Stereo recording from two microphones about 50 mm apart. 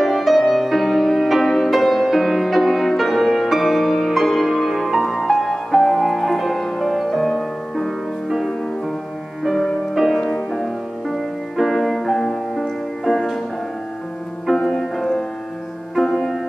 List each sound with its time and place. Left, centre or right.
0.0 s music: centre
14.4 s music: centre